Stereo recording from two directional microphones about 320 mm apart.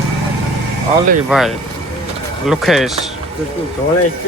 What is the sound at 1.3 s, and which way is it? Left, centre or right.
Speech, centre.